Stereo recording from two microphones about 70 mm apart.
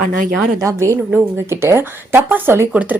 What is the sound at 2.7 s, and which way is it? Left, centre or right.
Speech, centre.